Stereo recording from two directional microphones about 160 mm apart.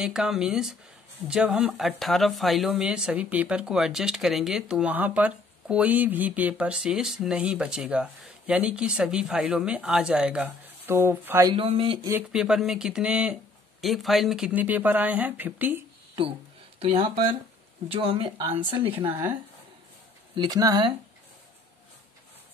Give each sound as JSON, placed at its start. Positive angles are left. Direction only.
{"t": 0.0, "sound": "speech", "side_deg": -5}
{"t": 11.5, "sound": "speech", "side_deg": -35}
{"t": 12.1, "sound": "speech", "side_deg": -5}
{"t": 16.8, "sound": "speech", "side_deg": -35}
{"t": 20.3, "sound": "speech", "side_deg": -25}